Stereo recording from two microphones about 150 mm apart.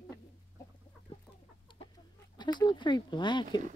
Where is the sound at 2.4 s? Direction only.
30° left (ahead or behind).